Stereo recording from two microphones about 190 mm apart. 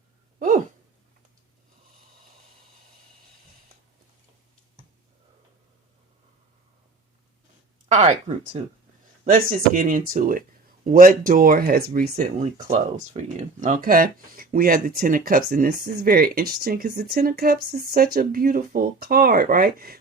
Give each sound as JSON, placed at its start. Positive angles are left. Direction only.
{"t": 0.3, "sound": "a sound", "side_deg": -40}
{"t": 7.9, "sound": "speech", "side_deg": -35}
{"t": 9.2, "sound": "speech", "side_deg": -45}
{"t": 12.4, "sound": "speech", "side_deg": -35}